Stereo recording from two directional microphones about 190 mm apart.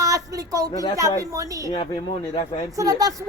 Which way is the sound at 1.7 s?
25° left (ahead or behind).